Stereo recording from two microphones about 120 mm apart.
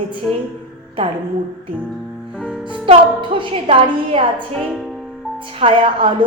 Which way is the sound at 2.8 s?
45° right (ahead or behind).